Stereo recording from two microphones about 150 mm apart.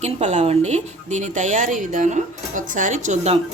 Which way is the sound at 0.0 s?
50° right (ahead or behind).